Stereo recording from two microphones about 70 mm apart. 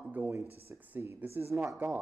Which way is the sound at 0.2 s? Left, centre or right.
Right.